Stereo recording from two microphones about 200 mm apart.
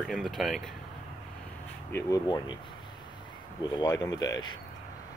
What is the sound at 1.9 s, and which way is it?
Speech, 20° left (ahead or behind).